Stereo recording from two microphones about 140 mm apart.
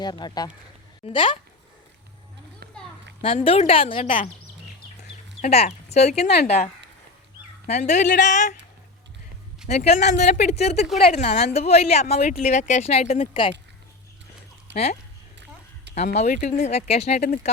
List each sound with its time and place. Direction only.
0.0 s speech: 30° left (ahead or behind)
3.2 s a woman's voice: 45° left (ahead or behind)
5.4 s a woman's voice: 50° left (ahead or behind)
7.7 s speech: 55° left (ahead or behind)
9.6 s a woman's voice: 50° left (ahead or behind)
14.7 s speech: 50° left (ahead or behind)
16.0 s a woman's voice: 55° left (ahead or behind)
17.2 s speech: 70° left (ahead or behind)